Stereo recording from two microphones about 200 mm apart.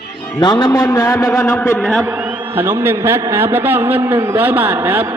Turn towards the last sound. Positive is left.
turn(degrees=-10)  # may be behind; listen again after turning